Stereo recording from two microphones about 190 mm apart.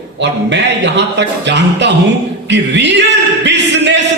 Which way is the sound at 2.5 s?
65° right (ahead or behind).